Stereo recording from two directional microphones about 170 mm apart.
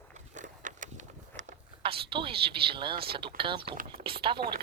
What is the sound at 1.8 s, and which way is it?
Speech, 30° right (ahead or behind).